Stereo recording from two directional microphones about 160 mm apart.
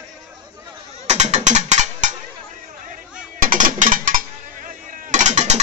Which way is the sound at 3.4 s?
50° right (ahead or behind).